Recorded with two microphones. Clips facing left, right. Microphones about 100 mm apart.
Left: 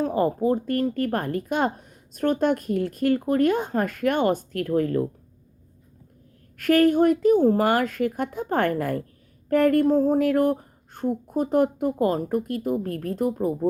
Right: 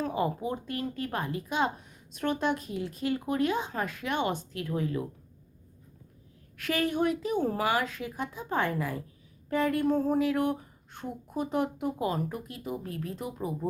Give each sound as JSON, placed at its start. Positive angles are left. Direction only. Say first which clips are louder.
{"t": 0.0, "sound": "a woman's voice", "louder": "left 8 dB", "side_deg": 45}
{"t": 6.6, "sound": "a woman's voice", "louder": "left 10 dB", "side_deg": 50}
{"t": 9.5, "sound": "a sound", "louder": "left 9 dB", "side_deg": 55}
{"t": 9.8, "sound": "a woman's voice", "louder": "left 6 dB", "side_deg": 40}